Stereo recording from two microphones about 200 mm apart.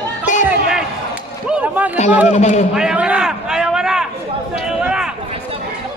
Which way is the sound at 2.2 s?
35° left (ahead or behind).